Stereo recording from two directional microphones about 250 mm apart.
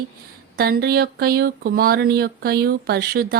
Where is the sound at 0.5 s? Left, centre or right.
Right.